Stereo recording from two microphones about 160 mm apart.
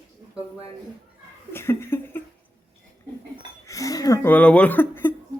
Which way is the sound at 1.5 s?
15° left (ahead or behind).